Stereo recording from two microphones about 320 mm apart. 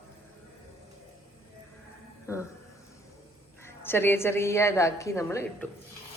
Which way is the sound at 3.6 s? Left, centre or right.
Centre.